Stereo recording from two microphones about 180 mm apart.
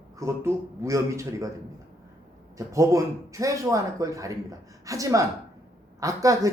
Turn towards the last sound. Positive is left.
turn(degrees=-20)  # may be behind; listen again after turning